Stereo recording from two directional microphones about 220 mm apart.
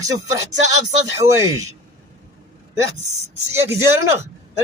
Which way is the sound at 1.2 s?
15° right (ahead or behind).